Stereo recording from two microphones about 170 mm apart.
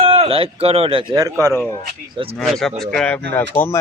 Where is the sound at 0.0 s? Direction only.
35° right (ahead or behind).